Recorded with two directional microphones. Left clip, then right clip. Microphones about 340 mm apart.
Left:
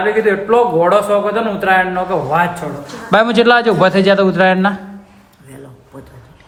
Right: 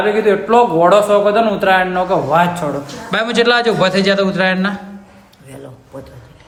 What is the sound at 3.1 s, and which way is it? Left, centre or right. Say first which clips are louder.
A man's voice: left 4 dB; centre.